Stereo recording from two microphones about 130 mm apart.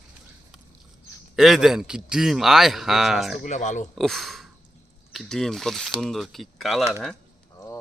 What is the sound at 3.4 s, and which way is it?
Speech, 70° left (ahead or behind).